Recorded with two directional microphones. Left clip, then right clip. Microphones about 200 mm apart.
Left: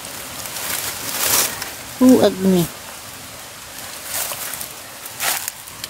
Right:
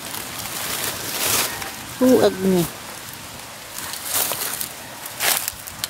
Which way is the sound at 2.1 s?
30° left (ahead or behind).